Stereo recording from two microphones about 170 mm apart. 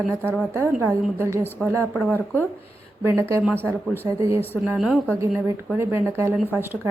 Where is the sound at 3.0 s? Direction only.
15° right (ahead or behind).